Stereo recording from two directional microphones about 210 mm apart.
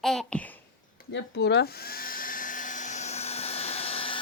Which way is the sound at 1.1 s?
55° left (ahead or behind).